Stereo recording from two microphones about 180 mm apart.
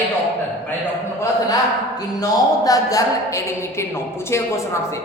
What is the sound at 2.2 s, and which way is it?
A woman's voice, 20° left (ahead or behind).